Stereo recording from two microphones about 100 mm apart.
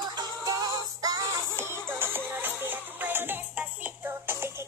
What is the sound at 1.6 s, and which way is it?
Music, 25° right (ahead or behind).